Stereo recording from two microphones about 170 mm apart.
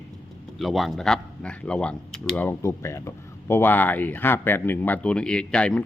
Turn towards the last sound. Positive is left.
turn(degrees=5)  # may be behind; listen again after turning